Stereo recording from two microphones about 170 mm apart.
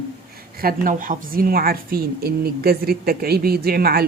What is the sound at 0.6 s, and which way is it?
A woman's voice, 55° right (ahead or behind).